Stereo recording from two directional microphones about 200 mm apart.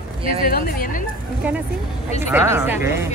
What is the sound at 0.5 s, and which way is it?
Speech, 45° left (ahead or behind).